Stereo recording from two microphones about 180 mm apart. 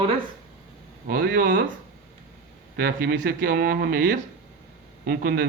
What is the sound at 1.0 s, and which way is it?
Speech, 55° right (ahead or behind).